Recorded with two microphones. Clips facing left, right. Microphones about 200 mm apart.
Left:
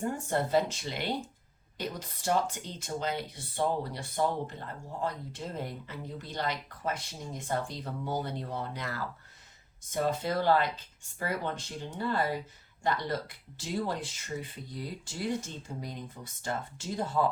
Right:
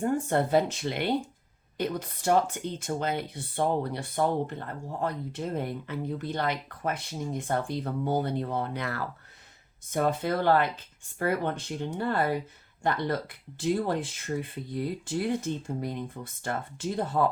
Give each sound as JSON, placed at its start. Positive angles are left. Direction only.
{"t": 0.0, "sound": "speech", "side_deg": -55}